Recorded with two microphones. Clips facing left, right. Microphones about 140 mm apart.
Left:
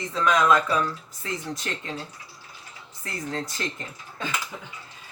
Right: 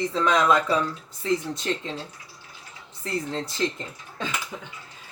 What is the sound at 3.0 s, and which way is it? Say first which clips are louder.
Speech: right 3 dB; 25° right (ahead or behind).